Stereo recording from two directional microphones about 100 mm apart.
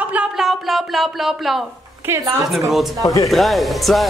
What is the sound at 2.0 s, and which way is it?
Speech, 30° right (ahead or behind).